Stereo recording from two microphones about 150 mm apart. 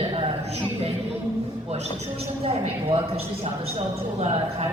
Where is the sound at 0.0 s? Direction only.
40° right (ahead or behind).